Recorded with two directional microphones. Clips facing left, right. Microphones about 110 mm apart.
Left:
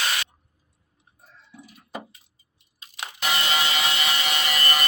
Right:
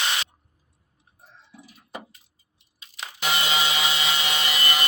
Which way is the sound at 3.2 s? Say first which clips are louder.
Even; 15° right (ahead or behind).